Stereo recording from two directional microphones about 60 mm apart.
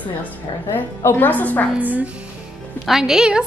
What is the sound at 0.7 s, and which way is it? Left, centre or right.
A woman's voice, left.